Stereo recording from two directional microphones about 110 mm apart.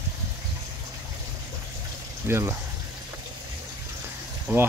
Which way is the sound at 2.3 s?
25° right (ahead or behind).